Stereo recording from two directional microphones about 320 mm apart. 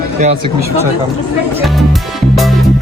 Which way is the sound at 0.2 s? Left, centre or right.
Right.